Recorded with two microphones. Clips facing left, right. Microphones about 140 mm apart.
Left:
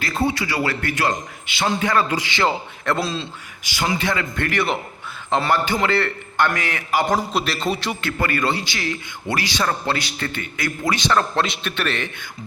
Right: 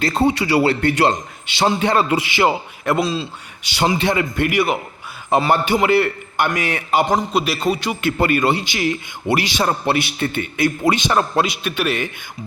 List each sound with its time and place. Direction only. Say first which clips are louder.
0.0 s a man's voice: right 5 dB; 35° right (ahead or behind)
2.3 s a man's voice: right 4 dB; 15° right (ahead or behind)
3.0 s a man's voice: right 5 dB; centre (ahead or behind)
3.8 s a man's voice: right 5 dB; 25° right (ahead or behind)
7.2 s a man's voice: right 3 dB; 5° right (ahead or behind)
8.0 s a man's voice: right 6 dB; 20° right (ahead or behind)